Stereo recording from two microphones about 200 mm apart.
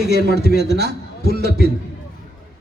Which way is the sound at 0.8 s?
55° right (ahead or behind).